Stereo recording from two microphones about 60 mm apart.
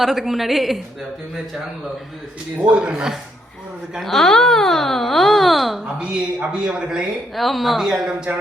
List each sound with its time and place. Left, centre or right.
0.0 s speech: centre
2.7 s a man's voice: centre
4.0 s speech: centre
5.8 s a man's voice: centre
7.3 s speech: centre